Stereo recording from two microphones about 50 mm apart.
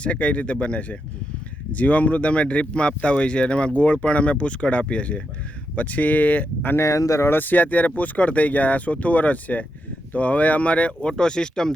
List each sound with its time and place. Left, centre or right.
0.0 s speech: left
6.7 s speech: left
7.3 s speech: left
11.2 s speech: centre